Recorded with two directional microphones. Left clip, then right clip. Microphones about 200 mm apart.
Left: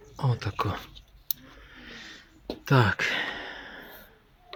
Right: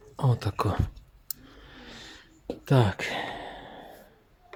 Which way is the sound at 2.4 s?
10° right (ahead or behind).